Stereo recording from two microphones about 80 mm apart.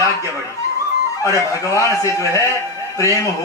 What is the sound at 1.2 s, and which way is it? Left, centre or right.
Speech, left.